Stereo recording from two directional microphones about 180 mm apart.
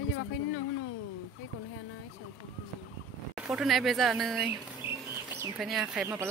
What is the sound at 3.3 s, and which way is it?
Speech, 5° right (ahead or behind).